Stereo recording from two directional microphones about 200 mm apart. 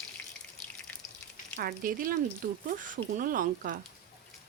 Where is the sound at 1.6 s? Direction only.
45° right (ahead or behind).